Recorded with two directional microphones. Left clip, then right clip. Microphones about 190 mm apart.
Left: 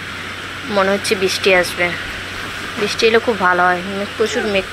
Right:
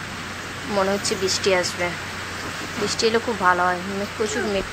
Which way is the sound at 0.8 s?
15° left (ahead or behind).